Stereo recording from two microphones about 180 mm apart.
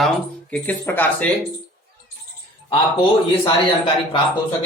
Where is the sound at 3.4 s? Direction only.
30° left (ahead or behind).